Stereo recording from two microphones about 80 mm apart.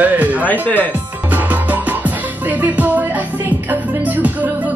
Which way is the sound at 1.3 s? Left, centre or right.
Right.